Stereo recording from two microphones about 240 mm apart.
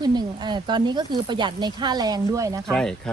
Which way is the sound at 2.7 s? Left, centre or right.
Centre.